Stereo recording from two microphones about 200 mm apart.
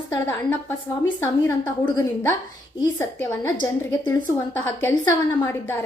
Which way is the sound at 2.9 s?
10° left (ahead or behind).